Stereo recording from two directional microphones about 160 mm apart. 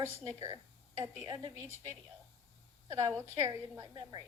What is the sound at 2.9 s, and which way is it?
A woman's voice, 20° right (ahead or behind).